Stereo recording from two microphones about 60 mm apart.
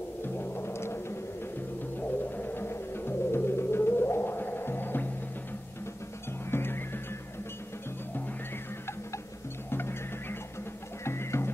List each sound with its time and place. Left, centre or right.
0.2 s music: left
2.0 s music: left
6.5 s music: left
9.7 s music: left
11.1 s music: left